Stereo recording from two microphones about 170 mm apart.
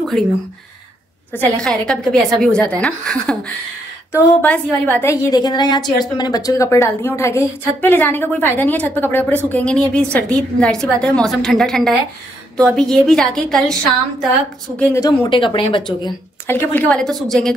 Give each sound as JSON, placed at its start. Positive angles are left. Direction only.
{"t": 1.3, "sound": "a woman's voice", "side_deg": 5}
{"t": 14.8, "sound": "speech", "side_deg": 15}
{"t": 16.4, "sound": "a woman's voice", "side_deg": 10}